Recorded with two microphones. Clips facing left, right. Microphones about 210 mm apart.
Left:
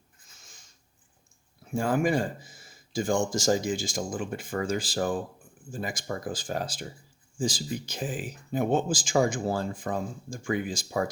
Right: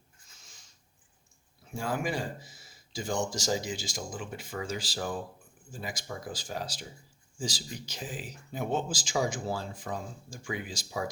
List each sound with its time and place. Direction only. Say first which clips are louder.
1.7 s speech: left 7 dB; 50° left (ahead or behind)